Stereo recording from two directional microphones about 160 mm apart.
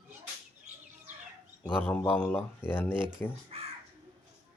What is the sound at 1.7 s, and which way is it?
Speech, 10° left (ahead or behind).